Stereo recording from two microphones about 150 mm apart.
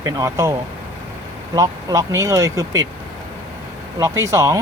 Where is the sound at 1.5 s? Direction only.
25° right (ahead or behind).